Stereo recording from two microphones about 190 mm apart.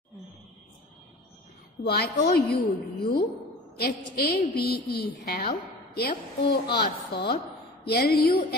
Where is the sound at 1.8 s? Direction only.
55° left (ahead or behind).